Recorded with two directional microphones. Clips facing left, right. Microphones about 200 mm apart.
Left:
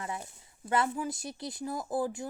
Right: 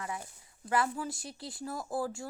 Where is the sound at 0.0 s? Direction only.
25° left (ahead or behind).